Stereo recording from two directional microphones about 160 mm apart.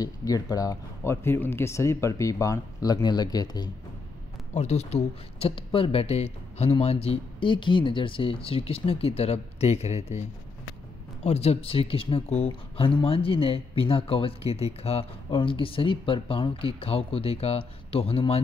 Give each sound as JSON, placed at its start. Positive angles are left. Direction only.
{"t": 0.0, "sound": "speech", "side_deg": 20}
{"t": 4.6, "sound": "speech", "side_deg": 40}
{"t": 11.2, "sound": "speech", "side_deg": 40}